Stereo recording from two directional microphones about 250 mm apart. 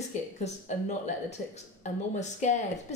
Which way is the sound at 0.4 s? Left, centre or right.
Left.